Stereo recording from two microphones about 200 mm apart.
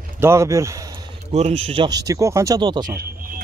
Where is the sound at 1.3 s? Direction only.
30° right (ahead or behind).